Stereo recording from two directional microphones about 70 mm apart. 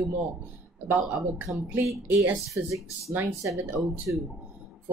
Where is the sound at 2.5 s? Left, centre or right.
Right.